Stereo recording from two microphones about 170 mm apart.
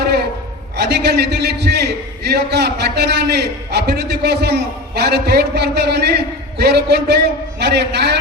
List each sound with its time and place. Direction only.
0.8 s a man's voice: 75° right (ahead or behind)